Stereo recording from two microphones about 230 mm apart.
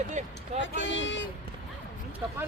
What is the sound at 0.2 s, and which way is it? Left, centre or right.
Speech, right.